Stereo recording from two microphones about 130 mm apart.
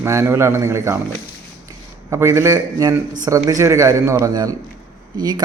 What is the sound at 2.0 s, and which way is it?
Speech, 20° right (ahead or behind).